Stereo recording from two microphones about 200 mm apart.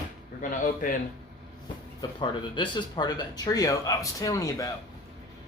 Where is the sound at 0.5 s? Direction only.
40° left (ahead or behind).